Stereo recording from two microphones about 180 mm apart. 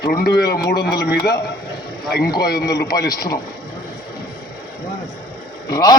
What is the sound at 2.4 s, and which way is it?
Speech, 60° left (ahead or behind).